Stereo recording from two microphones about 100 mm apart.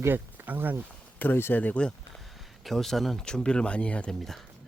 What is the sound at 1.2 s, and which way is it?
Speech, 20° left (ahead or behind).